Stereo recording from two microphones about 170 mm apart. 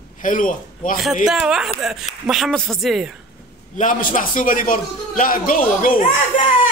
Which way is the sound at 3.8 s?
50° left (ahead or behind).